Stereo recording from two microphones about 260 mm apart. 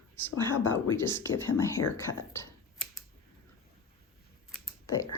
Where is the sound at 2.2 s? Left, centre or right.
Centre.